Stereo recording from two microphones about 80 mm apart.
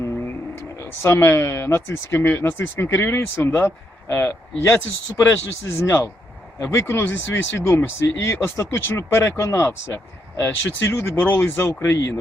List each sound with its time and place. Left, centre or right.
0.0 s speech: left